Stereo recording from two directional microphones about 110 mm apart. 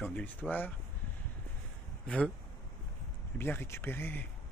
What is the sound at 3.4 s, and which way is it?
Speech, 20° left (ahead or behind).